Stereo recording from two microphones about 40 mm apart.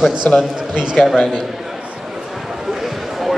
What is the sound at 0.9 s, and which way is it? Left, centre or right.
Speech, centre.